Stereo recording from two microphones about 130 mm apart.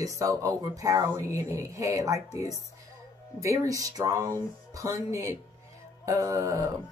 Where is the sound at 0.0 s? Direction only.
25° right (ahead or behind).